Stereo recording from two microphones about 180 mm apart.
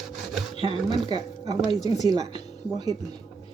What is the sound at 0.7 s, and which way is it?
Speech, 25° right (ahead or behind).